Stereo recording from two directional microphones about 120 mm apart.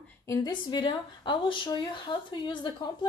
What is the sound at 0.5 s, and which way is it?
Speech, 40° left (ahead or behind).